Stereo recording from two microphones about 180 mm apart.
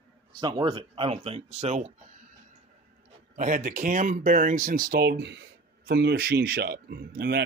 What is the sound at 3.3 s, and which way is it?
Speech, 50° right (ahead or behind).